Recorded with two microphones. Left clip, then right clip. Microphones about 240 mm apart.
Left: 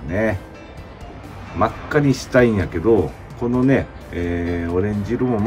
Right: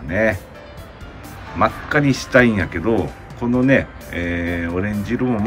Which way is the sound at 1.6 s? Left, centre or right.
Centre.